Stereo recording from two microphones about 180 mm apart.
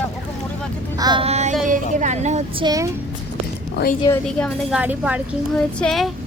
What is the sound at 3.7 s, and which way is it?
Speech, 55° left (ahead or behind).